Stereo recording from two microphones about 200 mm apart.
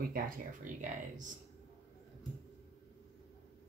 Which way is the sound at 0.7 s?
40° right (ahead or behind).